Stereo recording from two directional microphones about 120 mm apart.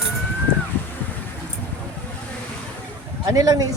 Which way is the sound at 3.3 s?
30° right (ahead or behind).